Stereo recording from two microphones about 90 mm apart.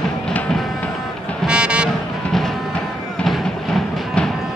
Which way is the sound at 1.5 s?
10° right (ahead or behind).